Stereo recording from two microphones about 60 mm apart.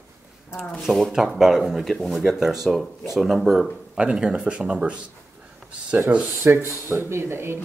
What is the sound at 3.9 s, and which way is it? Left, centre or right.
Speech, centre.